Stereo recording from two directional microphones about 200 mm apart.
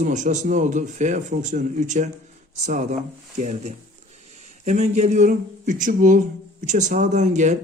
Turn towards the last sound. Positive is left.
turn(degrees=-35)  # may be behind; listen again after turning